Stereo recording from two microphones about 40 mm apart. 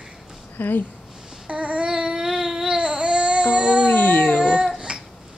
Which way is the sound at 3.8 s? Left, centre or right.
Left.